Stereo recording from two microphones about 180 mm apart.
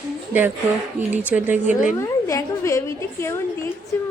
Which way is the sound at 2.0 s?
15° left (ahead or behind).